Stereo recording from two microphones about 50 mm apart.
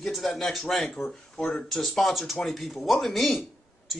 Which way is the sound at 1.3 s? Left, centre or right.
Centre.